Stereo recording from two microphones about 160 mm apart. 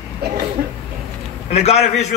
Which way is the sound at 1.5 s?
40° left (ahead or behind).